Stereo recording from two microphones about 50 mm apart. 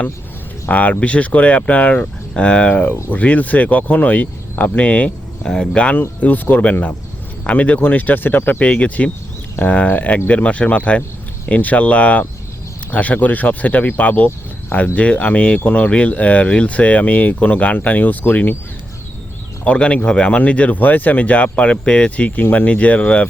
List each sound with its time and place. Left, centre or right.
0.7 s speech: left
2.8 s speech: left
5.4 s speech: centre
6.1 s speech: left
8.6 s speech: left
19.6 s speech: left